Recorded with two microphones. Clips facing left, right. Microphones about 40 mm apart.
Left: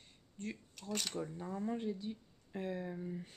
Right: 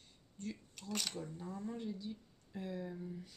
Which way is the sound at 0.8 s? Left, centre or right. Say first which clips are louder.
Left 2 dB; centre.